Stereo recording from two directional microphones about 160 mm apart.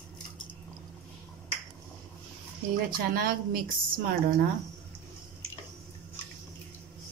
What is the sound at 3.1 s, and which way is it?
A woman's voice, 65° right (ahead or behind).